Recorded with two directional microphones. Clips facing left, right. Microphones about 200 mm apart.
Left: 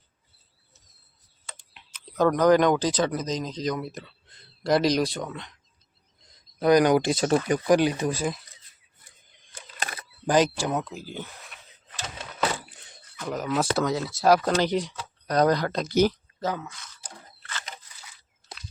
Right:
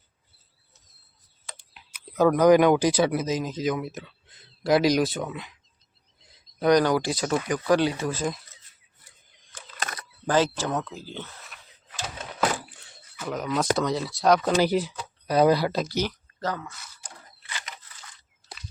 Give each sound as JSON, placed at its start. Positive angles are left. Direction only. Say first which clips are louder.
{"t": 1.7, "sound": "speech", "louder": "right 2 dB", "side_deg": -5}
{"t": 6.2, "sound": "a sound", "louder": "even", "side_deg": 0}
{"t": 6.8, "sound": "speech", "louder": "left 3 dB", "side_deg": 20}
{"t": 7.7, "sound": "speech", "louder": "left 1 dB", "side_deg": 15}
{"t": 10.2, "sound": "speech", "louder": "left 1 dB", "side_deg": 15}
{"t": 11.4, "sound": "a sound", "louder": "even", "side_deg": 0}
{"t": 13.1, "sound": "speech", "louder": "left 1 dB", "side_deg": 0}
{"t": 14.5, "sound": "speech", "louder": "right 2 dB", "side_deg": -5}
{"t": 16.4, "sound": "speech", "louder": "left 1 dB", "side_deg": 10}
{"t": 16.6, "sound": "speech", "louder": "even", "side_deg": -5}